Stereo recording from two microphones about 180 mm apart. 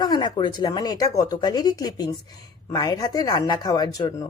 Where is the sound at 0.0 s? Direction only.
25° left (ahead or behind).